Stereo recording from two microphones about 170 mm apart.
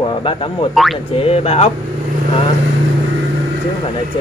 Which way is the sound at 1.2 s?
35° left (ahead or behind).